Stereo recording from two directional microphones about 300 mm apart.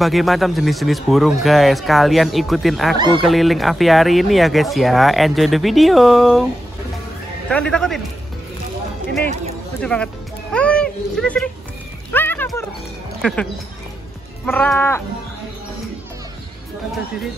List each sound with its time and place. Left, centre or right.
0.0 s speech: centre
7.4 s speech: centre
9.8 s speech: centre
12.1 s a sound: centre
13.2 s speech: centre
14.4 s speech: centre